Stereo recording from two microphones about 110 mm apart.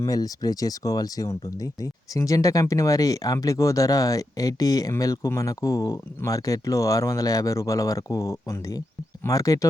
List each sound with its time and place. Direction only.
0.0 s speech: 35° left (ahead or behind)